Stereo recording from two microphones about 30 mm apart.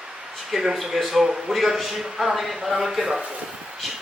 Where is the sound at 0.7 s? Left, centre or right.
Centre.